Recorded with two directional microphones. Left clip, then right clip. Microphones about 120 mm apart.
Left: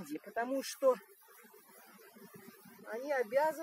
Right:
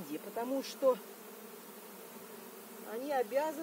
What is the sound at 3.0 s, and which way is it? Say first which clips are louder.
Speech: even; 35° right (ahead or behind).